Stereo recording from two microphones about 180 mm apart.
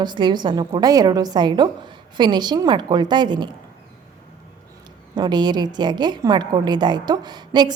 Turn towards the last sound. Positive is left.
turn(degrees=-25)  # may be behind; listen again after turning